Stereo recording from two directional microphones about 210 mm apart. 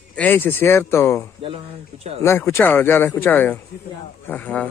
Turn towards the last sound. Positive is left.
turn(degrees=5)  # may be behind; listen again after turning